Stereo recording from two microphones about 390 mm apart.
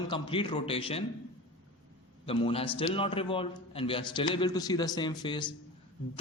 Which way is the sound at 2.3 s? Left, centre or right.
Centre.